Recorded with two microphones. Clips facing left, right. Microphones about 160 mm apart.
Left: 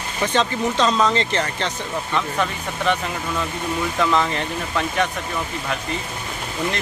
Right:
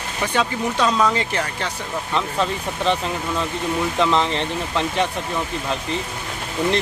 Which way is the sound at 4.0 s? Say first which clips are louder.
Even; 25° right (ahead or behind).